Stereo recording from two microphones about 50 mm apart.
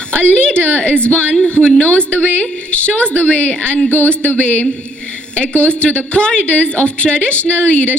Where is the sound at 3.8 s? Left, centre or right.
Left.